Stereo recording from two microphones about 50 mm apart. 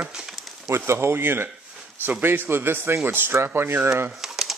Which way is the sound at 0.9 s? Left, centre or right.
Right.